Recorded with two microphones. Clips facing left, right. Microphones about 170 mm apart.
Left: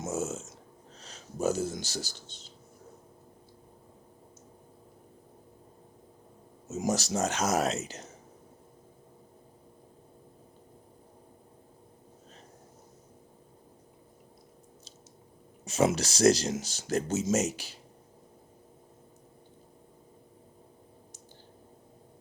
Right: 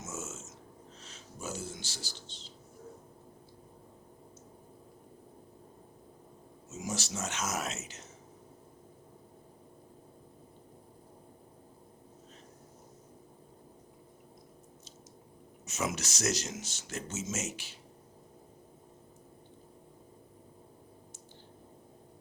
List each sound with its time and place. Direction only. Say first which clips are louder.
0.0 s a sound: left 10 dB; 35° left (ahead or behind)
6.7 s speech: left 8 dB; 40° left (ahead or behind)
15.6 s speech: left 9 dB; 30° left (ahead or behind)